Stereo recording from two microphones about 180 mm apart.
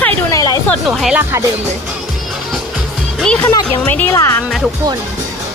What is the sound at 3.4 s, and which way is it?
Speech, 15° left (ahead or behind).